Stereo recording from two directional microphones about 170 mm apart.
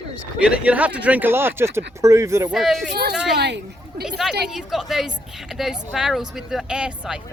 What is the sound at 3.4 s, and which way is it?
Speech, 85° right.